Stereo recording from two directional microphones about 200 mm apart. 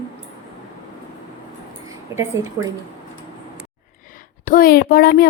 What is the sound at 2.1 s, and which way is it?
Speech, 15° right (ahead or behind).